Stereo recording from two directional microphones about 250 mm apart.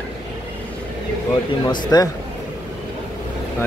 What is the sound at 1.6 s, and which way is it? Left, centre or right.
Speech, centre.